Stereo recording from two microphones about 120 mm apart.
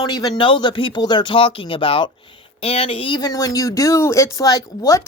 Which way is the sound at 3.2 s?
30° left (ahead or behind).